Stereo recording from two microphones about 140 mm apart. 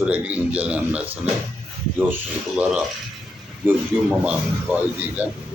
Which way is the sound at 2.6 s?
10° right (ahead or behind).